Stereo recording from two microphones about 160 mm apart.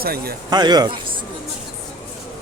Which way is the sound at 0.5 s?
25° right (ahead or behind).